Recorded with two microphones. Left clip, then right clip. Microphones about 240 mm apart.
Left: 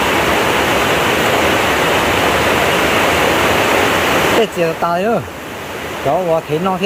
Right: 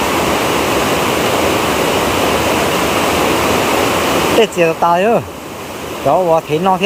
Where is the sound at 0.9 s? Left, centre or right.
Right.